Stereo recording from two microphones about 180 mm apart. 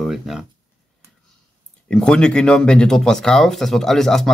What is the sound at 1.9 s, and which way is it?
Speech, 5° left (ahead or behind).